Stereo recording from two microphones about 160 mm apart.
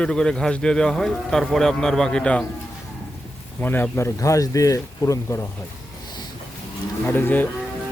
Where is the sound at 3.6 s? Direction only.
10° left (ahead or behind).